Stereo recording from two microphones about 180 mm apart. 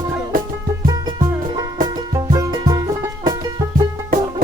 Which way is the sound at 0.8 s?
25° right (ahead or behind).